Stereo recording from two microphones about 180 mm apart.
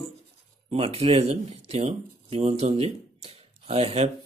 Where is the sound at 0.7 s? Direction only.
35° right (ahead or behind).